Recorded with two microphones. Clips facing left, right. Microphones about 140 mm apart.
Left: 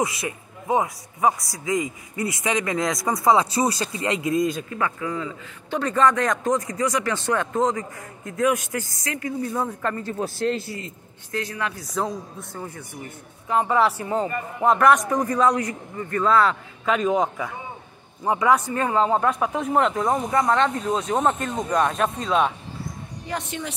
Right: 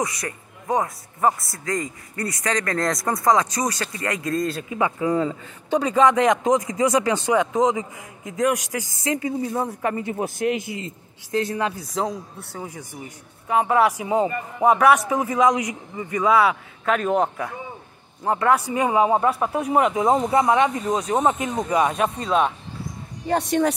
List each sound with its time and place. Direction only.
0.7 s a man's voice: centre (ahead or behind)
3.6 s speech: 15° left (ahead or behind)
4.7 s a man's voice: 20° right (ahead or behind)
8.3 s a man's voice: centre (ahead or behind)
9.0 s speech: 25° right (ahead or behind)
9.4 s a man's voice: 15° right (ahead or behind)
11.3 s speech: 30° right (ahead or behind)
12.5 s a man's voice: 10° right (ahead or behind)
20.1 s a man's voice: 20° right (ahead or behind); by 22.5 s 5° right (ahead or behind)
23.2 s a woman's voice: 40° right (ahead or behind)